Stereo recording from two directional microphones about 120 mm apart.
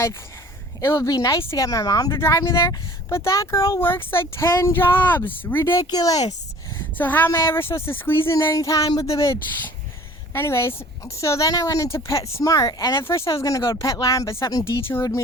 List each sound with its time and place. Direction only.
0.8 s speech: 25° left (ahead or behind)
5.8 s speech: 30° left (ahead or behind)
6.7 s speech: 15° left (ahead or behind)
10.3 s speech: 20° left (ahead or behind)